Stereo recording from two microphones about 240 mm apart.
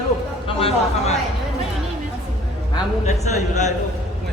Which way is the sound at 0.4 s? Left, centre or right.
Left.